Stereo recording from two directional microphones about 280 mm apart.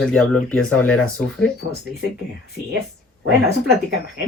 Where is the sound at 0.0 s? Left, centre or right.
Centre.